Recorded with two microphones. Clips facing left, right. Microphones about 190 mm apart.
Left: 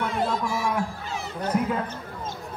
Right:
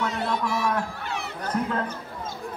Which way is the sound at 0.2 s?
65° right (ahead or behind).